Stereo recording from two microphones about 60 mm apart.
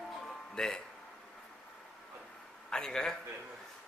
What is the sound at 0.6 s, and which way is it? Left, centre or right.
Speech, centre.